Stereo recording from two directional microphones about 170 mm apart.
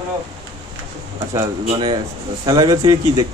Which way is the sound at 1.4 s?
35° right (ahead or behind).